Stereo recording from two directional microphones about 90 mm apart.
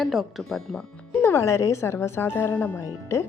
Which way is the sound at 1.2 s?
30° left (ahead or behind).